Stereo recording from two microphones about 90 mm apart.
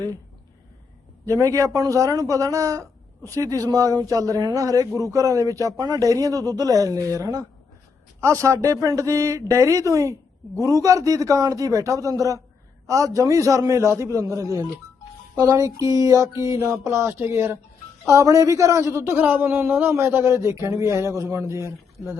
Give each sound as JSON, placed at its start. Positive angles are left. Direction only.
{"t": 1.2, "sound": "a man's voice", "side_deg": -40}